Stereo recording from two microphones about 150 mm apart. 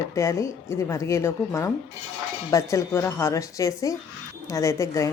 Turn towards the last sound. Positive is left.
turn(degrees=20)  # may be behind; listen again after turning